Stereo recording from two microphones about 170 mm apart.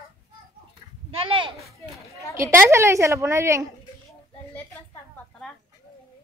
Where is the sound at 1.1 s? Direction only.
30° right (ahead or behind).